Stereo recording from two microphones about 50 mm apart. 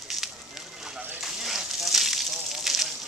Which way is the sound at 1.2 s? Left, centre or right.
Centre.